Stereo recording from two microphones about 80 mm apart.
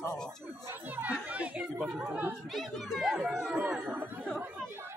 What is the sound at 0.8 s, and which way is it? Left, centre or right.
Speech, right.